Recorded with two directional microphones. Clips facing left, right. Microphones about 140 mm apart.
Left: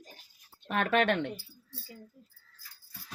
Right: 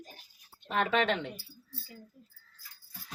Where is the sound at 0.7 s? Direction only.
55° left (ahead or behind).